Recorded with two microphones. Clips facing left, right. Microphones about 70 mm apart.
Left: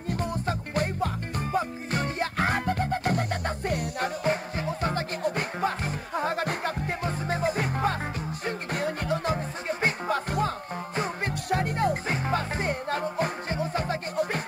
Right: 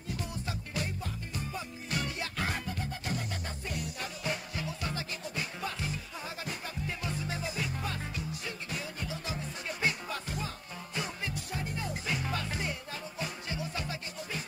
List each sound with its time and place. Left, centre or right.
0.1 s music: left
4.3 s music: left
7.0 s music: left
9.7 s music: left
12.1 s music: left